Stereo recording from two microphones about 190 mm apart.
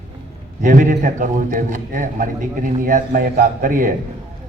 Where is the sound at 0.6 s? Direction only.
45° right (ahead or behind).